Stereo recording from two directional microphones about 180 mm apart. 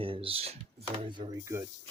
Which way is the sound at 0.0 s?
30° right (ahead or behind).